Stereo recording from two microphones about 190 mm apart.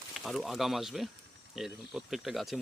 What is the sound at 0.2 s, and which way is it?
Speech, centre (ahead or behind).